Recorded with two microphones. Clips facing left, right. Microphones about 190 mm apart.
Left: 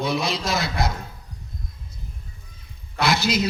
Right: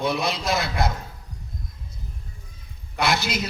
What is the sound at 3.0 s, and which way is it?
Speech, 55° right (ahead or behind).